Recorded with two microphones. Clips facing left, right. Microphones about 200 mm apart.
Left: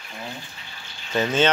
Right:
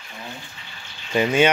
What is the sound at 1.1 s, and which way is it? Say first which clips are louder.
Speech: right 3 dB; 10° right (ahead or behind).